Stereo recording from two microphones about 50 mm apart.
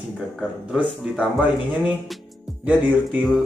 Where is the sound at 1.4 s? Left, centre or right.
Right.